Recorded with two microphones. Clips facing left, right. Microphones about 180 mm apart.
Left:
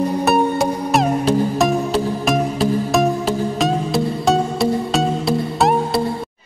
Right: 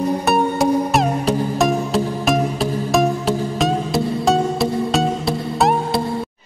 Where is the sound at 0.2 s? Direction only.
Centre (ahead or behind).